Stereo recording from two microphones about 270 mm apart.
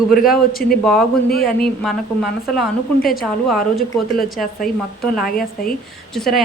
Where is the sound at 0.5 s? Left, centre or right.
Left.